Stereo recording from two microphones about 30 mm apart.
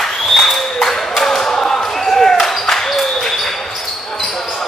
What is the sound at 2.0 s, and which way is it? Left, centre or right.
Basketball bounce, centre.